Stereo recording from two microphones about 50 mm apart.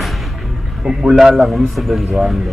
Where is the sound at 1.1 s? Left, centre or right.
Centre.